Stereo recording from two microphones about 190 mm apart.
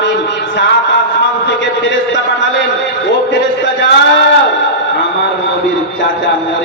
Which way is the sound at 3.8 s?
65° left (ahead or behind).